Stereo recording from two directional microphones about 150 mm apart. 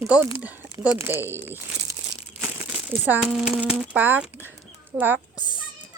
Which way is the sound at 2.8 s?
10° right (ahead or behind).